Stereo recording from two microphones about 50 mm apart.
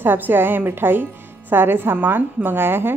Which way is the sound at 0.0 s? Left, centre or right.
Right.